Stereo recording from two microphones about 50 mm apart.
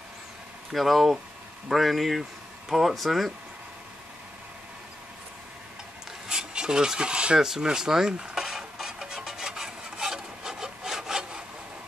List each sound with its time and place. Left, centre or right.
0.7 s speech: centre
6.2 s filing: centre
7.3 s stir: centre